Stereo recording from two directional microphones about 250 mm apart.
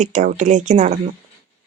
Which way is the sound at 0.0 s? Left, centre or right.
Right.